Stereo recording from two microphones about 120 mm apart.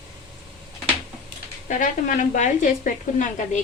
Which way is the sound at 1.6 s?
90° left.